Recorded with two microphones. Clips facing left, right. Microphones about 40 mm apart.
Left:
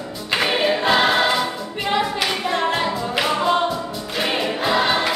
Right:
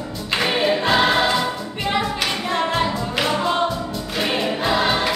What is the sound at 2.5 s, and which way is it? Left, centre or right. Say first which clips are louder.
Music: right 2 dB; centre.